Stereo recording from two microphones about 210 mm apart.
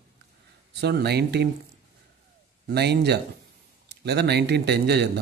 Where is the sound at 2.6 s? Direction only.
50° right (ahead or behind).